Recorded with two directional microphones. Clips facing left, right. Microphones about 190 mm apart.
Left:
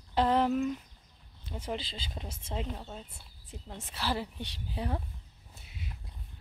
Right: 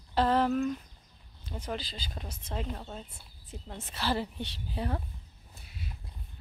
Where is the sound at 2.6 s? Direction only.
5° left (ahead or behind).